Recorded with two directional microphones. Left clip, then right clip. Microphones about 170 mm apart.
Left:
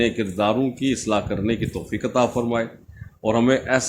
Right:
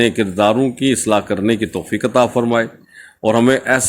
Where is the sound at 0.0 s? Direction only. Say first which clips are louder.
Right 7 dB; 45° right (ahead or behind).